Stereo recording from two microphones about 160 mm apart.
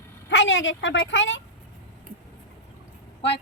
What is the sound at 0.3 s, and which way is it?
A woman's voice, 90° left.